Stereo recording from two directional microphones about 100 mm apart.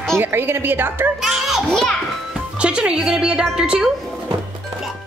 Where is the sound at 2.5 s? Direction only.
10° right (ahead or behind).